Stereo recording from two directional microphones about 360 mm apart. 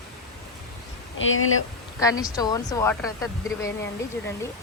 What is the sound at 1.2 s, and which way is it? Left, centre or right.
Speech, left.